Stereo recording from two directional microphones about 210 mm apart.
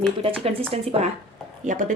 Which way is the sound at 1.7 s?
40° right (ahead or behind).